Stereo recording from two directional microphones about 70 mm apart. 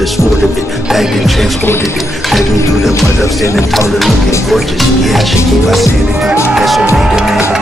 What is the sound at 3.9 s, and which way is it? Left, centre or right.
Speech, centre.